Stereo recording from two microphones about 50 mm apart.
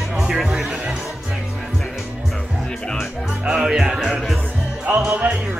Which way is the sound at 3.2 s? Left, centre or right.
Centre.